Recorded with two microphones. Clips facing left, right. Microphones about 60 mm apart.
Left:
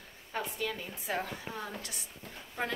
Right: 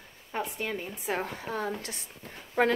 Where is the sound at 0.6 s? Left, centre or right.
Right.